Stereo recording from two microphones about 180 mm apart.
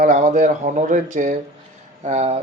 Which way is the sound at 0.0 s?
45° right (ahead or behind).